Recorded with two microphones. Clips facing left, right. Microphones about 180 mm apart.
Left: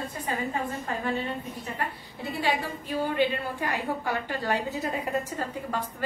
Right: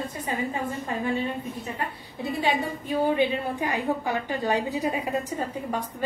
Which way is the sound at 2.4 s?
20° right (ahead or behind).